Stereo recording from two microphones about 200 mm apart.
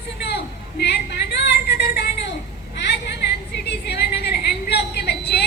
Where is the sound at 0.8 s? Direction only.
55° left (ahead or behind).